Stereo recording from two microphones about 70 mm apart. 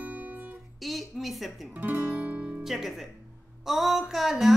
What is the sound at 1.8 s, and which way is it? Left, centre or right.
Guitar, right.